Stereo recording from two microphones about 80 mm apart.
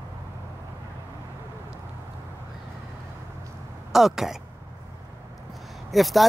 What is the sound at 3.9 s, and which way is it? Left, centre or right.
Speech, centre.